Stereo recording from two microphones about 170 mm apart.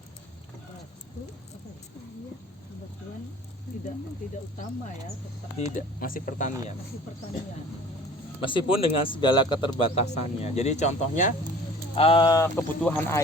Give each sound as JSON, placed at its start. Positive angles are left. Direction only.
{"t": 5.5, "sound": "speech", "side_deg": 45}
{"t": 8.4, "sound": "speech", "side_deg": 30}
{"t": 11.9, "sound": "speech", "side_deg": 30}
{"t": 12.4, "sound": "speech", "side_deg": 10}